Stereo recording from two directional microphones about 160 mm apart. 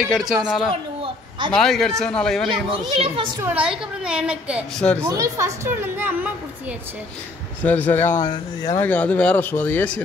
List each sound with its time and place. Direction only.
0.0 s a woman's voice: centre (ahead or behind)
3.0 s a child's voice: 30° right (ahead or behind)
3.4 s a woman's voice: 5° right (ahead or behind)
5.0 s a woman's voice: 20° right (ahead or behind)
7.6 s speech: 10° left (ahead or behind)
8.8 s speech: 10° left (ahead or behind)